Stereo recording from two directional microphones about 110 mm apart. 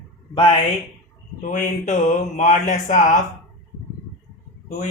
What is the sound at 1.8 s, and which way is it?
Speech, 90° left.